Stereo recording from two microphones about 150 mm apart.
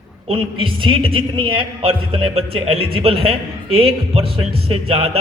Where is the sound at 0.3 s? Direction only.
35° right (ahead or behind).